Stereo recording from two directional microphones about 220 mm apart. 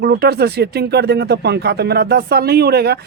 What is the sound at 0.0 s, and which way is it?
Speech, 45° right (ahead or behind).